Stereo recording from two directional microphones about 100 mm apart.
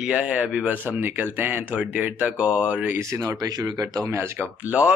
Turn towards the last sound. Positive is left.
turn(degrees=-10)  # may be behind; listen again after turning